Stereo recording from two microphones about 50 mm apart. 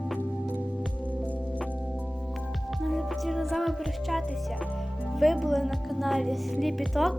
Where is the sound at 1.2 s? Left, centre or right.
Left.